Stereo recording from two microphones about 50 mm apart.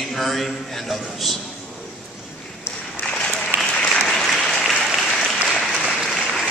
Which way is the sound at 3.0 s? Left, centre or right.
Centre.